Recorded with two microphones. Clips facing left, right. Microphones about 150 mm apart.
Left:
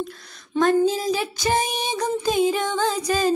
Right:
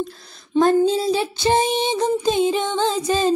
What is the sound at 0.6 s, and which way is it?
Child singing, 30° right (ahead or behind).